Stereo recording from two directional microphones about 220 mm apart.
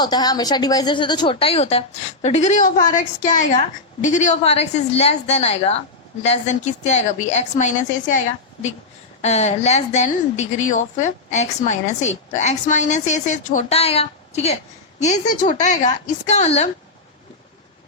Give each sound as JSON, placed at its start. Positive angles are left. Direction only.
{"t": 0.0, "sound": "a woman's voice", "side_deg": 20}
{"t": 9.2, "sound": "a woman's voice", "side_deg": 30}